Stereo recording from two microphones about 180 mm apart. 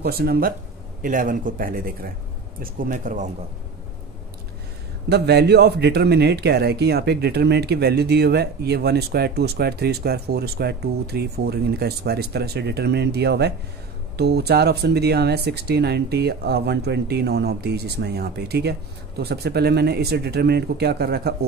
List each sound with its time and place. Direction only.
0.0 s speech: 60° right (ahead or behind)
5.1 s speech: 65° right (ahead or behind)